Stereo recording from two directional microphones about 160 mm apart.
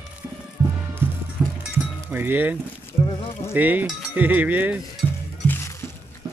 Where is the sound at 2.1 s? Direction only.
10° right (ahead or behind).